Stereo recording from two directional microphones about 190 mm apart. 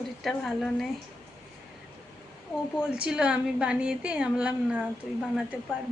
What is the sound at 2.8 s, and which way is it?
A woman's voice, 5° right (ahead or behind).